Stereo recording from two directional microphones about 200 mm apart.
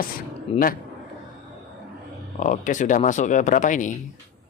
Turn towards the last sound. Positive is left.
turn(degrees=40)  # may be behind; listen again after turning